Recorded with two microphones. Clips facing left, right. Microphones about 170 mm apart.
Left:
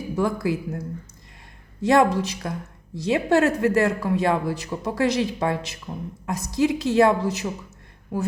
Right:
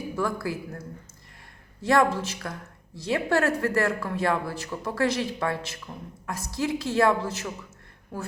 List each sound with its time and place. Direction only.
0.2 s speech: 20° left (ahead or behind)
1.8 s a woman's voice: 20° left (ahead or behind)